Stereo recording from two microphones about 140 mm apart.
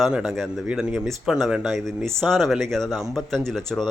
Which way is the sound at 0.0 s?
5° right (ahead or behind).